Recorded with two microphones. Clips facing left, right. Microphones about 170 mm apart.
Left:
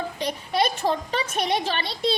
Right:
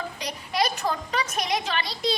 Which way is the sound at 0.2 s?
30° left (ahead or behind).